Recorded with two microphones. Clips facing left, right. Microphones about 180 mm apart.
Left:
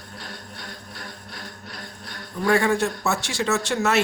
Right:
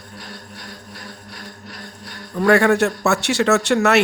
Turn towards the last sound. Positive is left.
turn(degrees=-65)  # may be behind; listen again after turning